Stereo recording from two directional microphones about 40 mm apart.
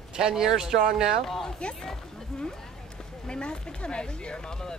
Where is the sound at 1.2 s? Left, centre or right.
Centre.